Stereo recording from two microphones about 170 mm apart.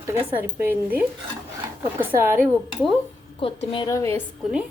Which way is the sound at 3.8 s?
15° left (ahead or behind).